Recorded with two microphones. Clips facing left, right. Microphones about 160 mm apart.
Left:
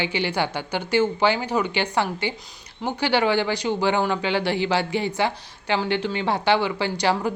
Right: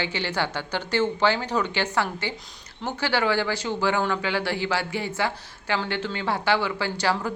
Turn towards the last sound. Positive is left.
turn(degrees=20)  # may be behind; listen again after turning